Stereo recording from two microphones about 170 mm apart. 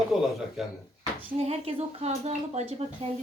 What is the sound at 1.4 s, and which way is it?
Speech, 40° right (ahead or behind).